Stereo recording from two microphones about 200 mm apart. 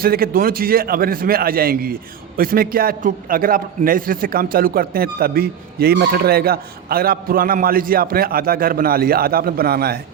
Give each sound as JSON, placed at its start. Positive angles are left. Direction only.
{"t": 0.0, "sound": "a man's voice", "side_deg": -50}